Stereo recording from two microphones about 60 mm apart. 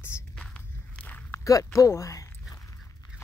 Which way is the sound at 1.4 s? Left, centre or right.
Left.